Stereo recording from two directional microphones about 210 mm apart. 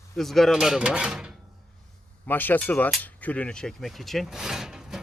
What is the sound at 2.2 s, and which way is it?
Speech, 10° left (ahead or behind).